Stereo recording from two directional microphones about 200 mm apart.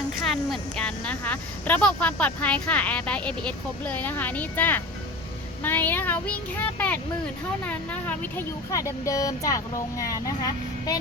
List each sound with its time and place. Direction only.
0.3 s speech: 5° left (ahead or behind)